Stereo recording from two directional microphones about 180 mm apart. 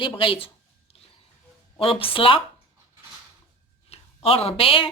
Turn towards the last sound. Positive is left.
turn(degrees=30)  # may be behind; listen again after turning